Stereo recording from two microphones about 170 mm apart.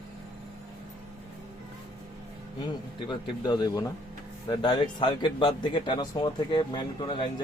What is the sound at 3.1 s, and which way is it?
A man's voice, 25° left (ahead or behind).